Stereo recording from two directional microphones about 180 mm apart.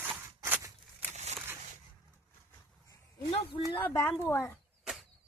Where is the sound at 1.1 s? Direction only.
40° right (ahead or behind).